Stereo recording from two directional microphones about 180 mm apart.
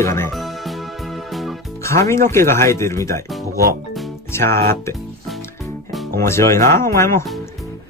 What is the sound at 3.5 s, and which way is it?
Music, 55° right (ahead or behind).